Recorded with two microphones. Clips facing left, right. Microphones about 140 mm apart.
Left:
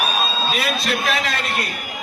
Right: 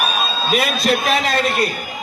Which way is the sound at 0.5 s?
45° right (ahead or behind).